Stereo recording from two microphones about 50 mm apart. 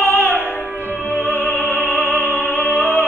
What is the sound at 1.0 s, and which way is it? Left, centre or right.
Opera, left.